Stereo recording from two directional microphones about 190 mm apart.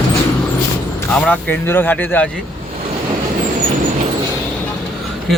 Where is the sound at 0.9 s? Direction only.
10° left (ahead or behind).